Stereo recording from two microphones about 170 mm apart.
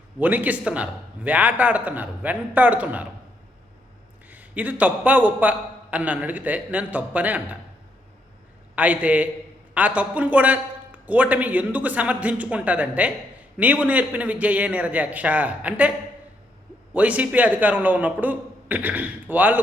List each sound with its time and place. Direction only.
0.2 s a man's voice: 10° right (ahead or behind)
4.3 s a man's voice: 10° right (ahead or behind)
8.7 s a man's voice: 10° right (ahead or behind)
16.9 s a man's voice: 10° right (ahead or behind)